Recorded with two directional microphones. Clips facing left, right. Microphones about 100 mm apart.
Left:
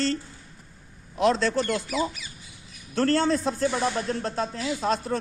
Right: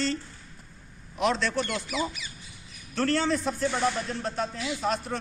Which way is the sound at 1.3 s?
40° left (ahead or behind).